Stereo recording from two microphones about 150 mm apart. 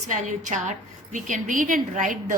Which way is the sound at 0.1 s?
55° right (ahead or behind).